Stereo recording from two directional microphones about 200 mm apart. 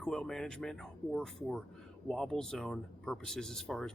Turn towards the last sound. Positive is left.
turn(degrees=0)  # may be behind; listen again after turning